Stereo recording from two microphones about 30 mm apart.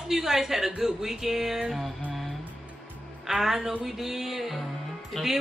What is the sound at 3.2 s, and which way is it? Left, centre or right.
A woman's voice, centre.